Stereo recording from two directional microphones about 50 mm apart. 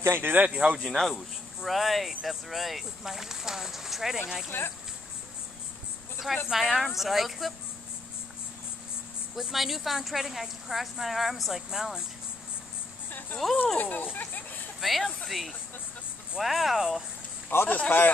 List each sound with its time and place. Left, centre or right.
0.2 s speech: right
0.6 s speech: centre
0.8 s speech: centre
4.5 s speech: left
6.5 s speech: centre
9.3 s speech: centre
13.4 s speech: centre
13.7 s speech: left
14.1 s a sound: left
14.8 s speech: centre
17.6 s speech: left